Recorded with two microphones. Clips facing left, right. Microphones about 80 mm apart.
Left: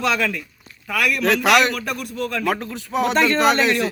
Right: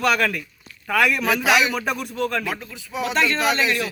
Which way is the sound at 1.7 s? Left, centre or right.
Centre.